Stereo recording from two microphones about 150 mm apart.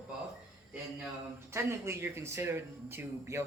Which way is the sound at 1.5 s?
15° right (ahead or behind).